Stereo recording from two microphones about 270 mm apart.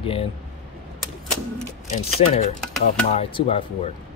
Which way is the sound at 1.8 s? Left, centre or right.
Left.